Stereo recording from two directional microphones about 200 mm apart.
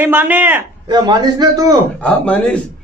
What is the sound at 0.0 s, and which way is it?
Speech, 10° right (ahead or behind).